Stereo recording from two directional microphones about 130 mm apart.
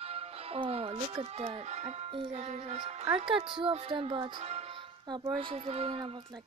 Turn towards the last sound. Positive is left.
turn(degrees=-45)  # may be behind; listen again after turning